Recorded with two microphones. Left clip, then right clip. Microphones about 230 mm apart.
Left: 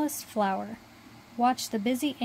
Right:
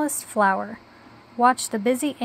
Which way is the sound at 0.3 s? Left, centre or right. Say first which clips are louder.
Right 10 dB; centre.